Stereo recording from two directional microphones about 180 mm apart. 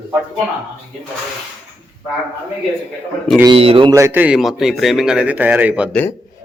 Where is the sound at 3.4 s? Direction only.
30° right (ahead or behind).